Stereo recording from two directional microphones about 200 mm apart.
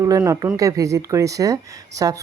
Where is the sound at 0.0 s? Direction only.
15° right (ahead or behind).